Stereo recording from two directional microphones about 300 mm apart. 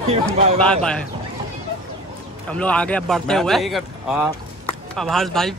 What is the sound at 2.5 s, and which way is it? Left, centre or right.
Speech, centre.